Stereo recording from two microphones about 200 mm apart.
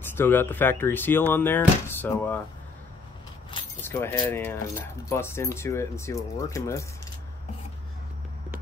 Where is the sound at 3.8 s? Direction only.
10° left (ahead or behind).